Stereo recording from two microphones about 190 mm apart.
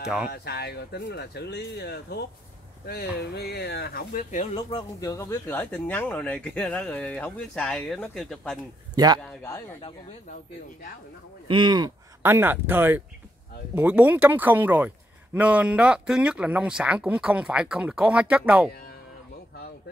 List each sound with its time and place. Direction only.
0.0 s speech: 5° right (ahead or behind)
0.3 s speech: 60° left (ahead or behind)
4.6 s speech: 20° left (ahead or behind); by 8.5 s centre (ahead or behind)
8.9 s speech: 20° right (ahead or behind)
9.2 s speech: 15° left (ahead or behind)
11.4 s speech: 25° right (ahead or behind); by 18.7 s 10° right (ahead or behind)